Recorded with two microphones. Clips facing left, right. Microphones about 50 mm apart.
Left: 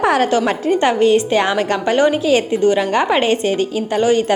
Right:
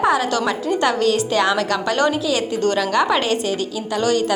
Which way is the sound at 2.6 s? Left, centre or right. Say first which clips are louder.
Left 5 dB; centre.